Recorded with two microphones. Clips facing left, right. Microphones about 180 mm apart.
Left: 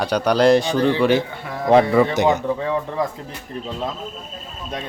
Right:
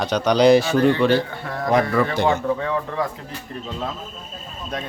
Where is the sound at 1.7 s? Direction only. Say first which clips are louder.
Left 5 dB; 20° left (ahead or behind).